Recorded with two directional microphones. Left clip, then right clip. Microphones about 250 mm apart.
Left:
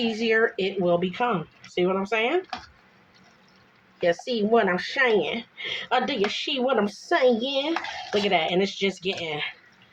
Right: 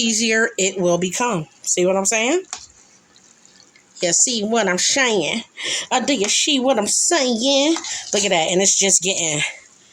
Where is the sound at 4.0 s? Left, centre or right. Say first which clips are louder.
Right 4 dB; right.